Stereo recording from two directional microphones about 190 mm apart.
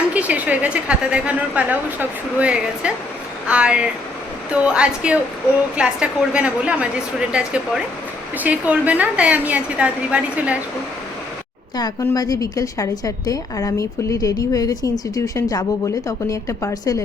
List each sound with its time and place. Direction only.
0.1 s a woman's voice: 5° right (ahead or behind)
11.8 s a woman's voice: 15° left (ahead or behind)